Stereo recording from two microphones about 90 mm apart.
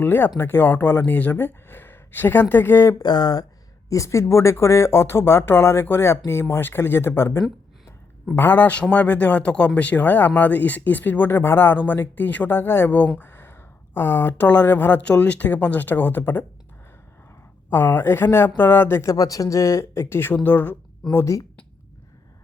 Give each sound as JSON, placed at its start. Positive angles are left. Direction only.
{"t": 0.0, "sound": "speech", "side_deg": 25}
{"t": 3.0, "sound": "speech", "side_deg": 50}
{"t": 3.8, "sound": "speech", "side_deg": 35}
{"t": 17.7, "sound": "speech", "side_deg": 25}
{"t": 19.1, "sound": "speech", "side_deg": 40}